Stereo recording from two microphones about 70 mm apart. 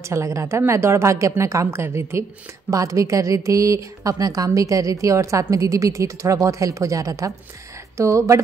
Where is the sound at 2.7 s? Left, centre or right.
Right.